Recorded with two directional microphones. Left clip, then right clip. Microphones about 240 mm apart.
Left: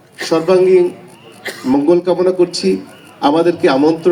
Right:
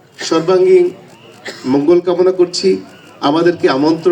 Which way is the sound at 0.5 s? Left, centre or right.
Centre.